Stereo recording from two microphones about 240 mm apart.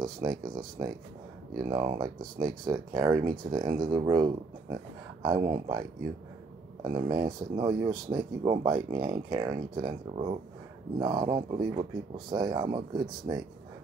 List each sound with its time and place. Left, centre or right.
0.0 s speech: centre